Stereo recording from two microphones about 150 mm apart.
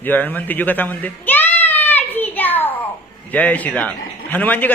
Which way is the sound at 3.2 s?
10° left (ahead or behind).